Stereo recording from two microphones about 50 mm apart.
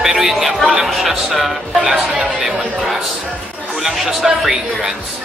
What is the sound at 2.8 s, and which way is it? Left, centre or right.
Music, centre.